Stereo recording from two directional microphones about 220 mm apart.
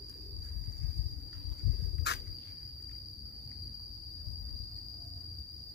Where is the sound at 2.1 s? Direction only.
50° left (ahead or behind).